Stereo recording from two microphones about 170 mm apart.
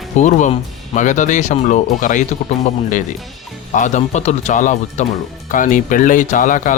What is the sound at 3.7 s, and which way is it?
Speech, 45° left (ahead or behind).